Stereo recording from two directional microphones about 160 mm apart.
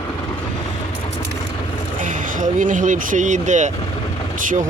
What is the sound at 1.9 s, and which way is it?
Speech, 55° right (ahead or behind).